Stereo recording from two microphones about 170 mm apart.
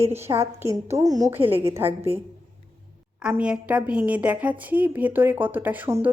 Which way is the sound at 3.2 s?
5° right (ahead or behind).